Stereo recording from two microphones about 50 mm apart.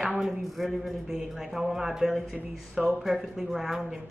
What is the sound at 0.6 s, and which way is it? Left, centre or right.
Speech, centre.